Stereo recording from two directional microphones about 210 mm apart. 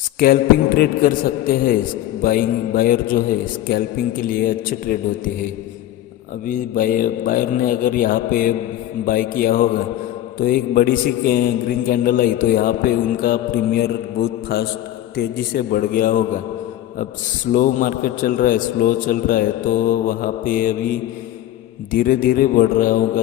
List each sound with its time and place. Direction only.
0.2 s a man's voice: 45° left (ahead or behind)
6.4 s a man's voice: 40° left (ahead or behind)
17.5 s a man's voice: 40° left (ahead or behind)
21.9 s a man's voice: 40° left (ahead or behind)